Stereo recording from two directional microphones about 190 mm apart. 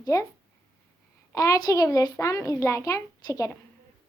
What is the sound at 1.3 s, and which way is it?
A child's voice, 20° left (ahead or behind).